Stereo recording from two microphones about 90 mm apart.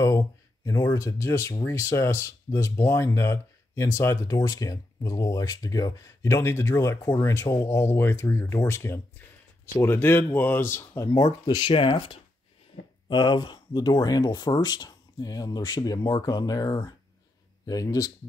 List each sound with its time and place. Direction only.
0.0 s speech: 35° left (ahead or behind)
11.4 s speech: 60° left (ahead or behind); by 12.2 s 85° left
13.1 s speech: 55° left (ahead or behind)